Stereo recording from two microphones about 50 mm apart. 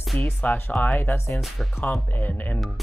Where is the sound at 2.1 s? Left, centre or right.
Left.